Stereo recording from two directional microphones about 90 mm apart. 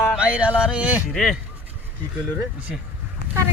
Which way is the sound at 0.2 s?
15° right (ahead or behind).